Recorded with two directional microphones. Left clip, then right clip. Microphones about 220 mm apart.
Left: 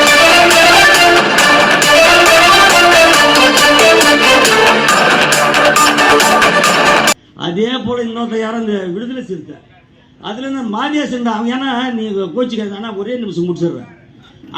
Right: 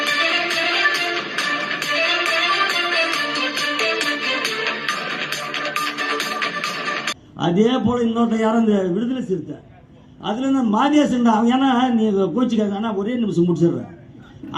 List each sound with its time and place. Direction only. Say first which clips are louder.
0.0 s music: left 13 dB; 45° left (ahead or behind)
7.4 s a man's voice: left 1 dB; 45° right (ahead or behind)
10.2 s a man's voice: right 1 dB; 50° right (ahead or behind)